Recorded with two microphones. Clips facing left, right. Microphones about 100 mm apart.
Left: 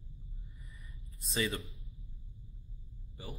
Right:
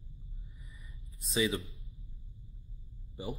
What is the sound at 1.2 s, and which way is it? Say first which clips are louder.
Speech: right 4 dB; 5° right (ahead or behind).